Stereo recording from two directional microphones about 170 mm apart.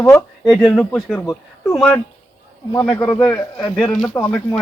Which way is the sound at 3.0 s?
10° left (ahead or behind).